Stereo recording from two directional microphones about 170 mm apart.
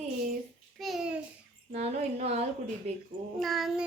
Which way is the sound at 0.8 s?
Centre (ahead or behind).